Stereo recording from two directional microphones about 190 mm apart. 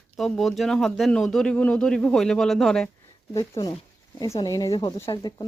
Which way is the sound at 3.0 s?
15° left (ahead or behind).